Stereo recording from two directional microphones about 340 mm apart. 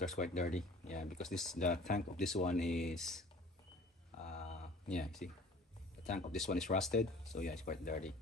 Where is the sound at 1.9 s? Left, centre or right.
Left.